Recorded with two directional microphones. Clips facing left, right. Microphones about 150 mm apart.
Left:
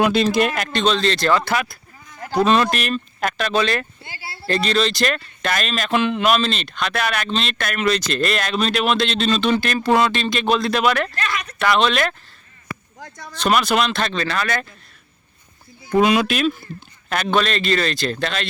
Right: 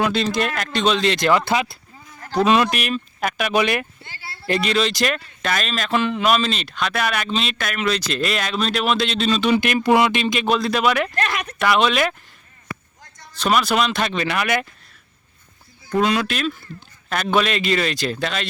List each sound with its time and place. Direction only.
0.0 s speech: 10° left (ahead or behind)
0.7 s speech: 10° right (ahead or behind); by 1.8 s 25° right (ahead or behind)
2.4 s speech: 5° right (ahead or behind)
4.0 s speech: 10° left (ahead or behind)
4.4 s speech: 10° right (ahead or behind)
10.4 s speech: 5° right (ahead or behind)
11.2 s speech: 60° right (ahead or behind)
11.6 s speech: 10° right (ahead or behind)
13.4 s speech: 5° right (ahead or behind)
16.0 s speech: 10° left (ahead or behind)
17.1 s speech: centre (ahead or behind)